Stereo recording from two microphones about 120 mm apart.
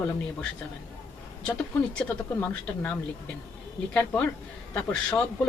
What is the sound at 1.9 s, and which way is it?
Speech, 15° left (ahead or behind).